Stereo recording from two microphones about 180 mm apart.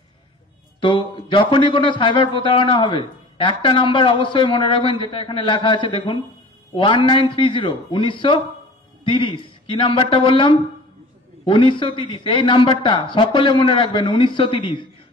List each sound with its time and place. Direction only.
0.7 s a man's voice: 30° left (ahead or behind)